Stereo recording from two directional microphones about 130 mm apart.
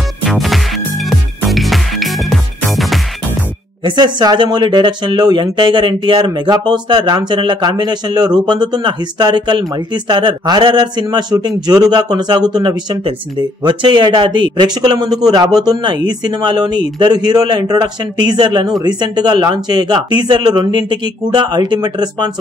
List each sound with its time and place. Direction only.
0.2 s music: centre (ahead or behind)
3.8 s speech: 35° right (ahead or behind)